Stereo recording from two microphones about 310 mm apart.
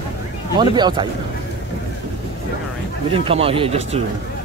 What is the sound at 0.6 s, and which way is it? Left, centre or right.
Speech, centre.